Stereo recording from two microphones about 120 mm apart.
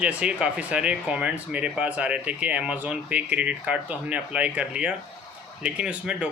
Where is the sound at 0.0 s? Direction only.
10° right (ahead or behind).